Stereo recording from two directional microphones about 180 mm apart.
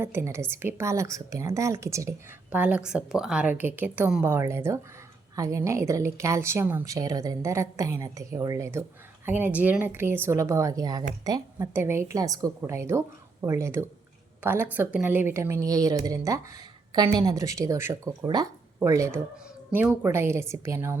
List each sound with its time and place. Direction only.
0.0 s a woman's voice: 15° right (ahead or behind)